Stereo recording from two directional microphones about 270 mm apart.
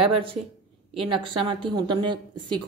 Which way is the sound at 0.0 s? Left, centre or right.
Centre.